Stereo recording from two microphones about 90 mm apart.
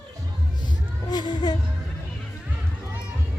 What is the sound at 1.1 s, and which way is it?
Speech, 50° left (ahead or behind).